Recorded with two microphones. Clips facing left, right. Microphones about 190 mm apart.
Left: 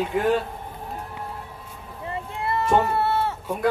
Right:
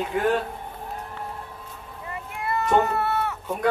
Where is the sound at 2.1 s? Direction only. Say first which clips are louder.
Left 2 dB; 25° left (ahead or behind).